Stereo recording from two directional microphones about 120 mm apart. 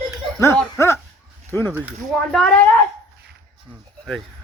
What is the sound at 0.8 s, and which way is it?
Speech, 20° left (ahead or behind).